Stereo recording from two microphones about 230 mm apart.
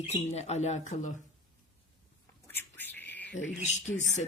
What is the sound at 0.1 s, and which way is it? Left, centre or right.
Speech, left.